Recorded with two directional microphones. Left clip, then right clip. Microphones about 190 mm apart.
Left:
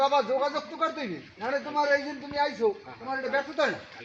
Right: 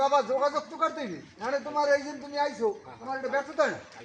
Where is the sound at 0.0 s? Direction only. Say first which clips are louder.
Even; 40° left (ahead or behind).